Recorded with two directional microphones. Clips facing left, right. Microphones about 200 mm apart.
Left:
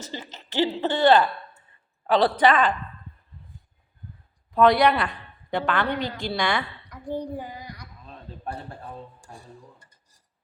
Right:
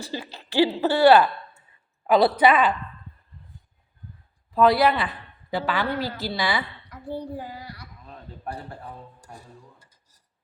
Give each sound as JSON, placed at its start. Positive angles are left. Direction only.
{"t": 0.0, "sound": "speech", "side_deg": -10}
{"t": 4.5, "sound": "a woman's voice", "side_deg": 0}
{"t": 6.9, "sound": "speech", "side_deg": 15}